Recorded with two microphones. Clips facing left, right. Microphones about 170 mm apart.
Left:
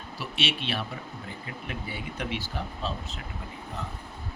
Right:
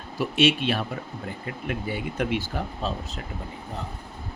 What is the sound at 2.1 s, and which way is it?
Speech, 50° right (ahead or behind).